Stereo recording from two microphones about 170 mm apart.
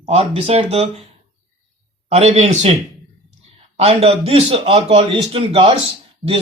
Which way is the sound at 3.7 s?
35° right (ahead or behind).